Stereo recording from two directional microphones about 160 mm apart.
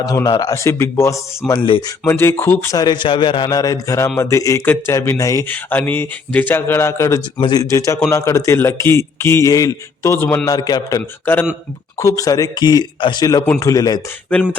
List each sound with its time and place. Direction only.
0.0 s speech: 20° left (ahead or behind)
1.5 s speech: 30° left (ahead or behind)
2.0 s a man's voice: 15° left (ahead or behind)
10.5 s a man's voice: 25° left (ahead or behind)